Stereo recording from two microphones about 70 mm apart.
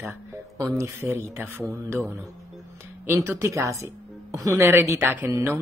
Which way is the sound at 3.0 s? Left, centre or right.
Right.